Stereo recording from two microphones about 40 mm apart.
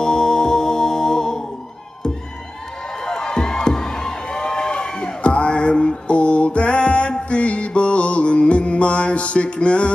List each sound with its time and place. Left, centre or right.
0.0 s music: centre
3.0 s music: centre